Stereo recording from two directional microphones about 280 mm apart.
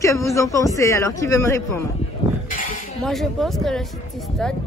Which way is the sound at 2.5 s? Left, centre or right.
Left.